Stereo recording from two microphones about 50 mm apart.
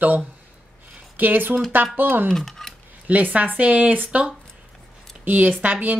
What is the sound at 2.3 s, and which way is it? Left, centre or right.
Speech, centre.